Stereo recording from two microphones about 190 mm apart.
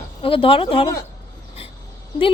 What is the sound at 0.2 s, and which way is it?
Speech, 30° left (ahead or behind).